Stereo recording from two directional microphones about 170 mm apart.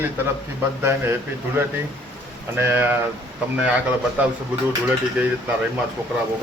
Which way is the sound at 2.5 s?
10° right (ahead or behind).